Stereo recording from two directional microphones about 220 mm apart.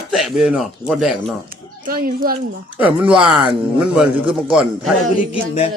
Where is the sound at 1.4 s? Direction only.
40° right (ahead or behind).